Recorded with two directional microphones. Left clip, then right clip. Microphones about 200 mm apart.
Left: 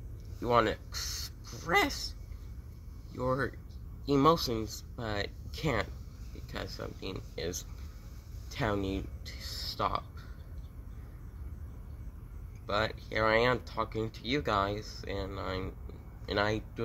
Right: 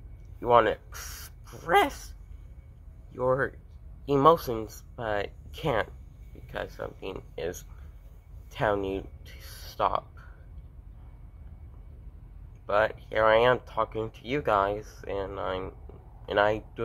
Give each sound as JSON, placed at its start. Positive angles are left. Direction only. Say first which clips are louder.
{"t": 0.4, "sound": "speech", "louder": "right 6 dB", "side_deg": 5}
{"t": 3.2, "sound": "speech", "louder": "right 6 dB", "side_deg": 5}
{"t": 8.5, "sound": "speech", "louder": "right 6 dB", "side_deg": 10}
{"t": 12.6, "sound": "speech", "louder": "right 7 dB", "side_deg": 5}